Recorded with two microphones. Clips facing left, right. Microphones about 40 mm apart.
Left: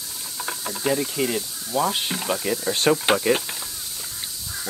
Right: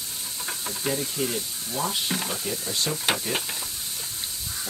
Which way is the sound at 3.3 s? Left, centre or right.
Left.